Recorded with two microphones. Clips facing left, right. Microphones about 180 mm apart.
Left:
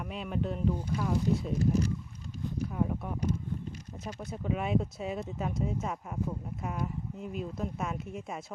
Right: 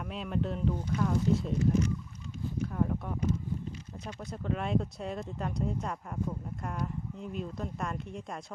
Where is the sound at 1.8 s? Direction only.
35° left (ahead or behind).